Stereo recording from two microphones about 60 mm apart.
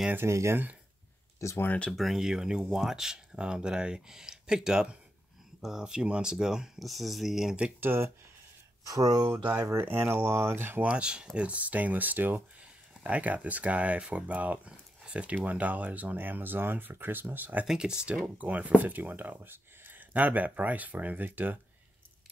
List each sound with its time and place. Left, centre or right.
0.3 s speech: right
1.4 s speech: left
1.9 s speech: centre
7.8 s speech: right
8.8 s speech: right
9.3 s speech: right
9.7 s speech: right
10.6 s speech: right
10.9 s speech: centre
17.6 s speech: centre
18.2 s speech: right